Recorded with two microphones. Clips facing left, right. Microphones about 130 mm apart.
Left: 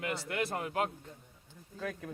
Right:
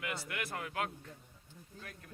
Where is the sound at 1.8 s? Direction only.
90° left.